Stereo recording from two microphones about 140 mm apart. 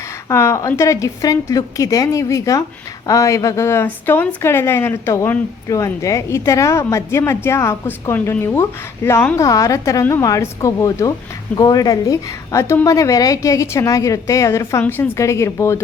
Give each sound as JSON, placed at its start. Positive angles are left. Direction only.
{"t": 0.3, "sound": "a woman's voice", "side_deg": 20}